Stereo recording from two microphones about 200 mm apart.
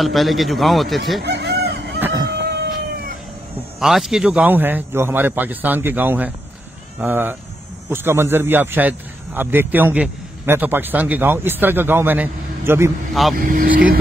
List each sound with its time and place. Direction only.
0.0 s a man's voice: centre (ahead or behind)
1.2 s chicken: 60° right (ahead or behind)
2.0 s a sound: 10° right (ahead or behind)
3.8 s a man's voice: centre (ahead or behind)
13.1 s speech: centre (ahead or behind)
13.4 s speech: 45° right (ahead or behind)